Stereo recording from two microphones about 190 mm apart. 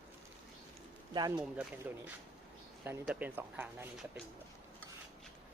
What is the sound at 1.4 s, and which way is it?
Speech, 5° right (ahead or behind).